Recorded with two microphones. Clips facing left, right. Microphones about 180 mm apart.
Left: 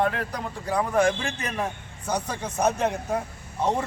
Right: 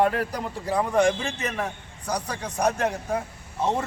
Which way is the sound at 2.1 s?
25° left (ahead or behind).